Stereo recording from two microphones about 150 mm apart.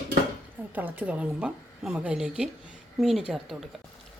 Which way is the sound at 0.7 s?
10° right (ahead or behind).